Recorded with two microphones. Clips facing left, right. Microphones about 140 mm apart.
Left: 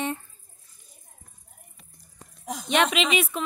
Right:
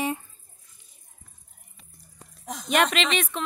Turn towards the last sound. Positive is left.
turn(degrees=5)  # may be behind; listen again after turning